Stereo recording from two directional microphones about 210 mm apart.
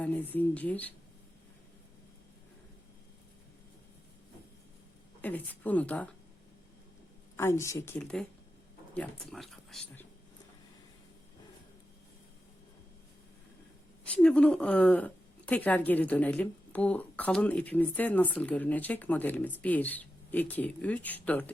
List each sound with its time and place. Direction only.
0.3 s a woman's voice: 5° left (ahead or behind)
5.2 s a woman's voice: 10° left (ahead or behind)
7.3 s a woman's voice: 15° left (ahead or behind)
14.0 s a woman's voice: 5° left (ahead or behind)